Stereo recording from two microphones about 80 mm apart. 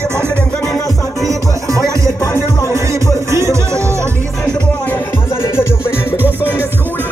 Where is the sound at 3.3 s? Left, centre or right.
Right.